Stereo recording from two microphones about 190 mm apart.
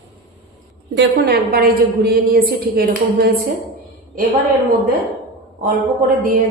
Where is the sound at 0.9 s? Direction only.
60° right (ahead or behind).